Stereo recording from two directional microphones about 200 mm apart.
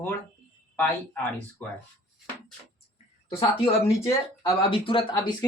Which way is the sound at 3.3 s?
30° left (ahead or behind).